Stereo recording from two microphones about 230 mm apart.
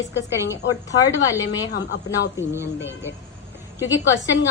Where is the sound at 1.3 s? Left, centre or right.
Centre.